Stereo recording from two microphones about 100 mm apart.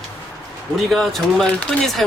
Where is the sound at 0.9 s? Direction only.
Centre (ahead or behind).